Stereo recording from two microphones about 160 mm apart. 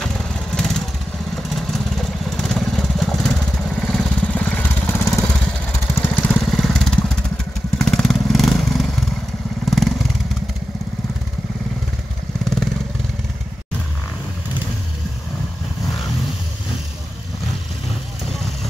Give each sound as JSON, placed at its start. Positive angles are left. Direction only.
{"t": 0.0, "sound": "vehicle", "side_deg": 5}
{"t": 4.9, "sound": "lawn mower", "side_deg": 15}
{"t": 5.9, "sound": "vehicle", "side_deg": 10}
{"t": 9.7, "sound": "motorcycle", "side_deg": 0}